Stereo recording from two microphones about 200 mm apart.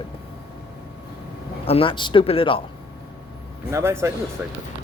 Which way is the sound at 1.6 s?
30° left (ahead or behind).